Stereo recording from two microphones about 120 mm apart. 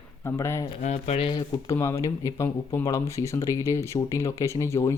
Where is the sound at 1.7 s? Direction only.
25° left (ahead or behind).